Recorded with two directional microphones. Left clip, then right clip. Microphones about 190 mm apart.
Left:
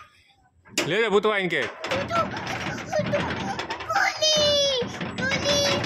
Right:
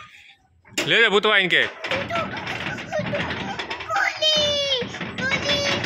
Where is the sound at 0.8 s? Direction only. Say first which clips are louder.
Right 4 dB; 10° left (ahead or behind).